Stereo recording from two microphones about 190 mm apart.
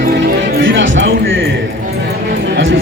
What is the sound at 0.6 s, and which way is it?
Music, 80° right.